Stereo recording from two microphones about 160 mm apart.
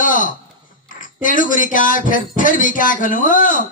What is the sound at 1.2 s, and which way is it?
Speech, 55° left (ahead or behind).